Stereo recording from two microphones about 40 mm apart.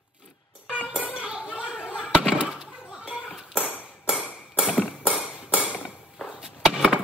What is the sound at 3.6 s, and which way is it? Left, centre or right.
Ping, left.